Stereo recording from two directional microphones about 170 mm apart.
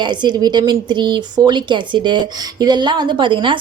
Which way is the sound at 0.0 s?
25° right (ahead or behind).